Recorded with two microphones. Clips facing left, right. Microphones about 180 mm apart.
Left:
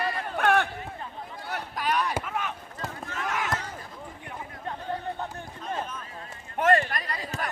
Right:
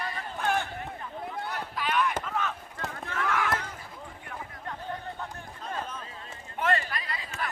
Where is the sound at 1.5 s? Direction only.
50° left (ahead or behind).